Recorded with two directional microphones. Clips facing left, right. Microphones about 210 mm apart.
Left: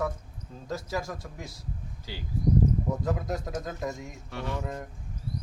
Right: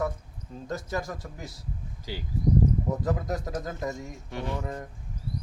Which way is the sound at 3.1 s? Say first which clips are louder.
Right 1 dB; centre (ahead or behind).